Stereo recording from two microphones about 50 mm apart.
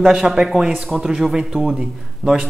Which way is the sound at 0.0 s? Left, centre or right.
Centre.